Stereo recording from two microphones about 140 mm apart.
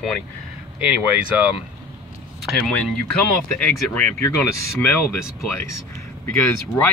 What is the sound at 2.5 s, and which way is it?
Speech, centre (ahead or behind).